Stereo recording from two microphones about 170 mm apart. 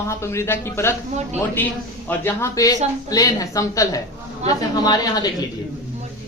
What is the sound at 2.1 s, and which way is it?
A man's voice, 15° left (ahead or behind).